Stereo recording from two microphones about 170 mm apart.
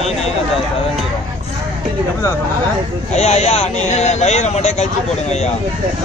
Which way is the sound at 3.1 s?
40° left (ahead or behind).